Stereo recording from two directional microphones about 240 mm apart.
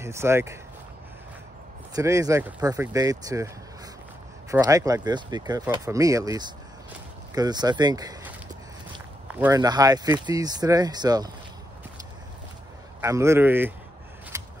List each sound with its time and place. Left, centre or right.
0.0 s speech: centre
2.0 s speech: centre
4.5 s speech: centre
9.4 s speech: centre
13.0 s speech: centre
14.3 s scissors: centre